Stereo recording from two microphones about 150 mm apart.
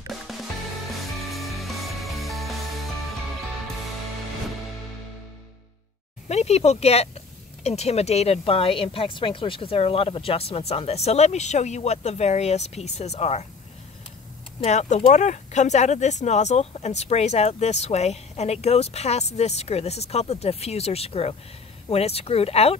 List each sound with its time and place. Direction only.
0.3 s music: centre (ahead or behind)
6.2 s speech: 45° left (ahead or behind)
14.6 s speech: 50° left (ahead or behind)